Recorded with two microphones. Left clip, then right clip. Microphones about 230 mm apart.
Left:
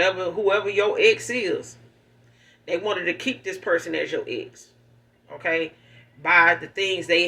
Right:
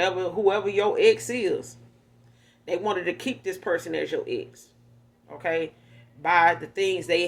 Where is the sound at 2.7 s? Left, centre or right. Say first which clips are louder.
Left 2 dB; right.